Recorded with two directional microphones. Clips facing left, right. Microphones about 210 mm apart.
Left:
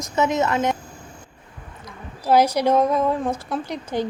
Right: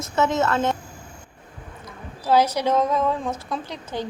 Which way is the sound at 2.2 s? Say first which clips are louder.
Left 2 dB; 10° left (ahead or behind).